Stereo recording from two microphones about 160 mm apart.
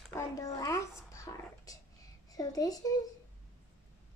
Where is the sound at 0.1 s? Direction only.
20° left (ahead or behind).